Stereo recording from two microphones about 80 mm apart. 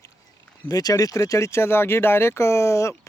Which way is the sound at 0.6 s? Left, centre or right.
Left.